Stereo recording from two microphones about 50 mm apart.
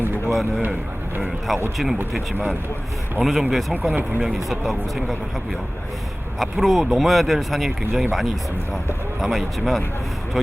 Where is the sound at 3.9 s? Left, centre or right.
Right.